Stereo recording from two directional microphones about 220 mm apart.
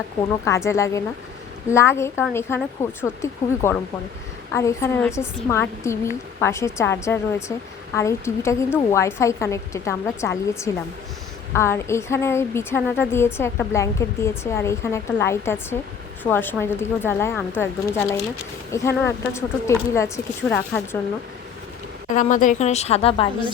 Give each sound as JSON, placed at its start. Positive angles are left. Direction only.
{"t": 0.4, "sound": "a woman's voice", "side_deg": 15}
{"t": 22.1, "sound": "speech", "side_deg": 35}